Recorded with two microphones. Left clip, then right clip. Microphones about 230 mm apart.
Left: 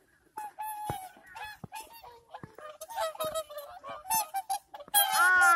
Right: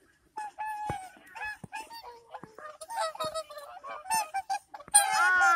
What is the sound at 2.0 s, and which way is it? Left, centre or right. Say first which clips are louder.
Giggle: right 3 dB; left.